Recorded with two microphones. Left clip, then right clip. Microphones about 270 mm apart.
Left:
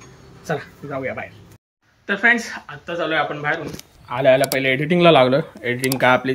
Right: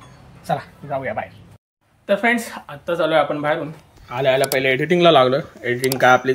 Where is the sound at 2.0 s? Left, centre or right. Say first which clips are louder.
Left 1 dB; centre.